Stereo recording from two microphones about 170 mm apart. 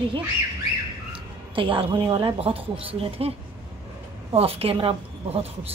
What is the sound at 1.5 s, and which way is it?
Speech, 30° right (ahead or behind).